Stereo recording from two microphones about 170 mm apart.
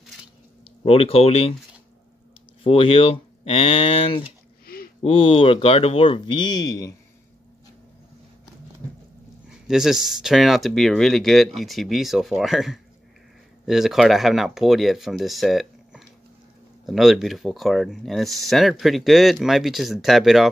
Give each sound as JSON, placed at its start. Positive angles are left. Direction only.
{"t": 0.8, "sound": "speech", "side_deg": 35}
{"t": 2.6, "sound": "speech", "side_deg": 35}
{"t": 4.6, "sound": "a sound", "side_deg": 60}
{"t": 5.0, "sound": "speech", "side_deg": 30}
{"t": 9.5, "sound": "speech", "side_deg": -5}